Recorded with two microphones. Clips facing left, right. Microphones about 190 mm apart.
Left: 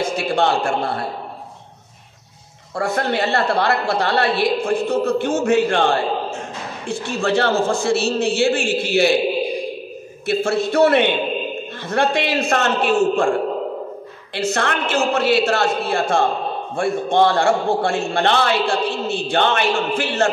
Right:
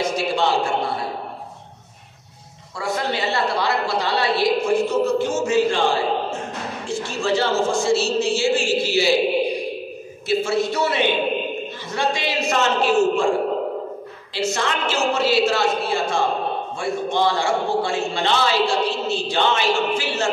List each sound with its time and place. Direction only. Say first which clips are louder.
0.0 s a man's voice: left 2 dB; 55° left (ahead or behind)
2.7 s a woman's voice: left 4 dB; 55° left (ahead or behind)
10.2 s a woman's voice: left 1 dB; 60° left (ahead or behind)
14.3 s a woman's voice: left 2 dB; 60° left (ahead or behind)